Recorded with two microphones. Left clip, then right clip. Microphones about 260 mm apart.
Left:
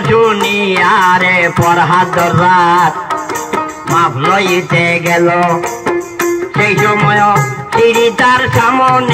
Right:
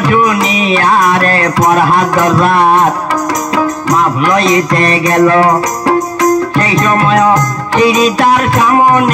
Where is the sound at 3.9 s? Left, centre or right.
Right.